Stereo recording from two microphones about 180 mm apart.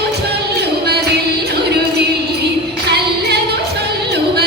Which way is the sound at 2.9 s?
65° right (ahead or behind).